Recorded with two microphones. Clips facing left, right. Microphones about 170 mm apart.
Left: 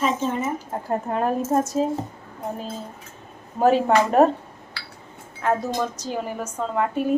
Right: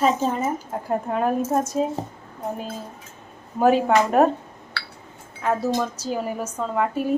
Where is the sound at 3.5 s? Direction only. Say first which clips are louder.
Even; centre (ahead or behind).